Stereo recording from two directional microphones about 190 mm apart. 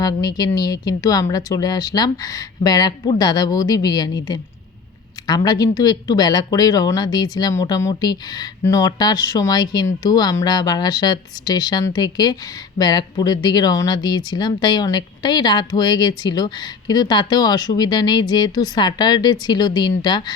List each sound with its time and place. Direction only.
0.0 s speech: 20° left (ahead or behind)